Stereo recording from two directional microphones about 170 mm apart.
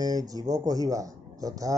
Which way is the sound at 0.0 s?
20° right (ahead or behind).